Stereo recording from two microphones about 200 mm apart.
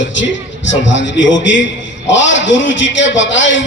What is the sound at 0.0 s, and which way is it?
A man's voice, 65° left (ahead or behind).